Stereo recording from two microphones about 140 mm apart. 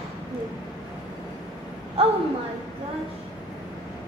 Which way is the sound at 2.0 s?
45° right (ahead or behind).